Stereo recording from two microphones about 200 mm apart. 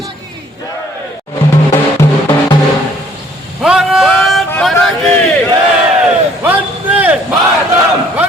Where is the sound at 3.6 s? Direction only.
Centre (ahead or behind).